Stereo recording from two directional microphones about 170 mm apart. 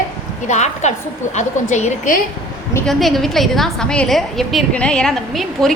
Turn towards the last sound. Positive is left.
turn(degrees=0)  # may be behind; listen again after turning